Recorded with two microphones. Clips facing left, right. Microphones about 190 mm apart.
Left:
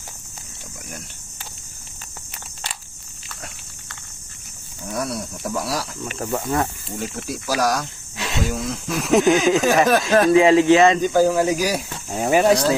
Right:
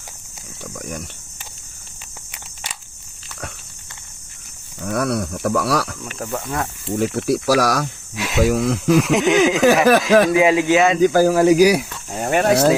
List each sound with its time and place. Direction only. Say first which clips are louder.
0.6 s speech: right 8 dB; 75° right (ahead or behind)
4.8 s speech: right 6 dB; 65° right (ahead or behind)
6.1 s speech: left 3 dB; centre (ahead or behind)
6.9 s speech: right 10 dB; 75° right (ahead or behind)
10.3 s speech: left 2 dB; 5° right (ahead or behind)
11.0 s speech: right 4 dB; 80° right
12.0 s speech: left 2 dB; centre (ahead or behind)